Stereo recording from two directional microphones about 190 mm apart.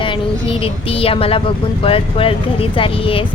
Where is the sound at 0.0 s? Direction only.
25° left (ahead or behind).